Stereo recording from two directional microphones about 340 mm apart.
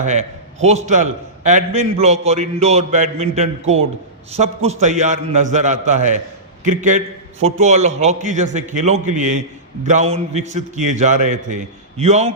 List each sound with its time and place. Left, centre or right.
0.0 s a man's voice: centre
7.4 s a man's voice: centre